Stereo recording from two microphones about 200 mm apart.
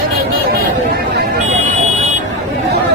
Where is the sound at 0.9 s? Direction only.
50° right (ahead or behind).